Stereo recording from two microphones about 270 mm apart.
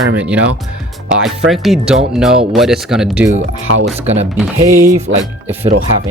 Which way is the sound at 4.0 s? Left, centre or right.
Right.